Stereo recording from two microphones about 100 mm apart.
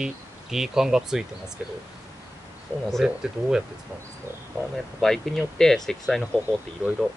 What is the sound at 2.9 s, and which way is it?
Speech, 5° right (ahead or behind).